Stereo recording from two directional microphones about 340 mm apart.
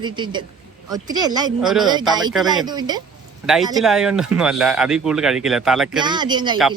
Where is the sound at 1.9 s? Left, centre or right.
Centre.